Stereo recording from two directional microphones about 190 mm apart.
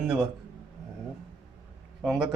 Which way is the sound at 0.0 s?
Centre (ahead or behind).